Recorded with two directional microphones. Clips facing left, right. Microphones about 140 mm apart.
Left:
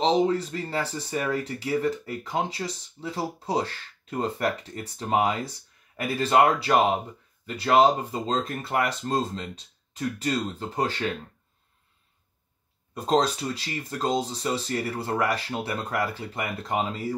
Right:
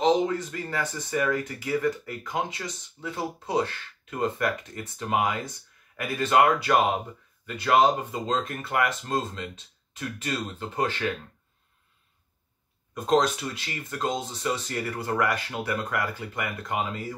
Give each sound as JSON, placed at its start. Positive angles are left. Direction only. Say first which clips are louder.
{"t": 0.0, "sound": "speech", "louder": "left 1 dB", "side_deg": 30}
{"t": 12.9, "sound": "speech", "louder": "even", "side_deg": 30}